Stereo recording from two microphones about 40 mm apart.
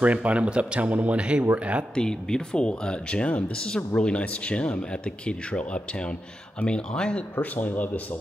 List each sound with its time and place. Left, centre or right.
0.0 s speech: right
2.0 s speech: centre
3.5 s speech: left
7.3 s speech: left